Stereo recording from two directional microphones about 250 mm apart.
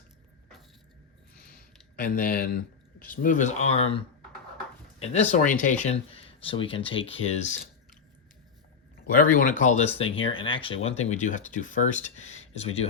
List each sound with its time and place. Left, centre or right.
2.0 s speech: left
9.0 s speech: left